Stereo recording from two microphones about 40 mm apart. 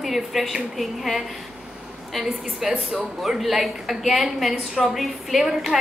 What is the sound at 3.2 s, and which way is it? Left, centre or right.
A woman's voice, centre.